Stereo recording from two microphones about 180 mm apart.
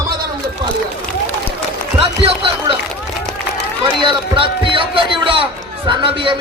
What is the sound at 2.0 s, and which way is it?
Music, 30° right (ahead or behind).